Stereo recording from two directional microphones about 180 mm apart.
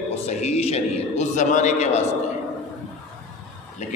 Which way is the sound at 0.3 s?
40° left (ahead or behind).